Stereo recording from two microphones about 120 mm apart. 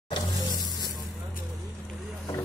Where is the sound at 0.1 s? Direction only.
35° left (ahead or behind).